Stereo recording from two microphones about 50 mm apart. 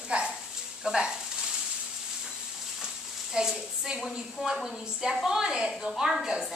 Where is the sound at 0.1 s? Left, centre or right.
Right.